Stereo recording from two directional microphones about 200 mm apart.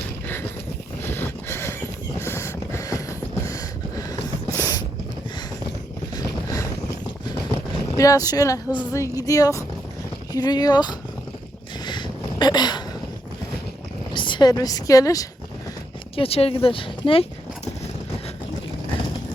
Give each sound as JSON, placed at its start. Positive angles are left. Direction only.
{"t": 1.0, "sound": "vehicle", "side_deg": 10}
{"t": 2.1, "sound": "a sound", "side_deg": 15}
{"t": 6.1, "sound": "boat", "side_deg": 15}
{"t": 7.9, "sound": "speech", "side_deg": 15}
{"t": 11.9, "sound": "a sound", "side_deg": 20}
{"t": 14.1, "sound": "a woman's voice", "side_deg": 25}
{"t": 16.1, "sound": "speech", "side_deg": 30}